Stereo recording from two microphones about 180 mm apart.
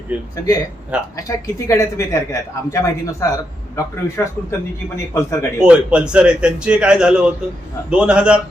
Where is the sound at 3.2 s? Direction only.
15° left (ahead or behind).